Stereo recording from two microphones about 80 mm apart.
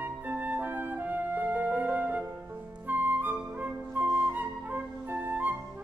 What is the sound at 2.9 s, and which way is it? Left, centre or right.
Flute, right.